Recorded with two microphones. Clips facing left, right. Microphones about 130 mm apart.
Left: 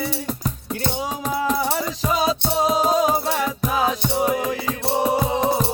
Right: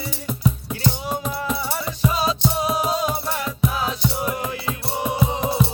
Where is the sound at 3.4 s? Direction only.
45° left (ahead or behind).